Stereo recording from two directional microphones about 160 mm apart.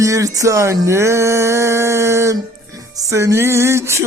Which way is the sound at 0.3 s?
20° right (ahead or behind).